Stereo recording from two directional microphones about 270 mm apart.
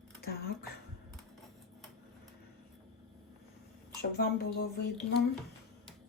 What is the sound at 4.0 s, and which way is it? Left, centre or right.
Speech, left.